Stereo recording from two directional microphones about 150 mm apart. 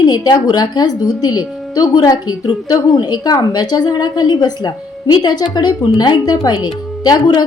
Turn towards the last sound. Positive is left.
turn(degrees=25)  # may be behind; listen again after turning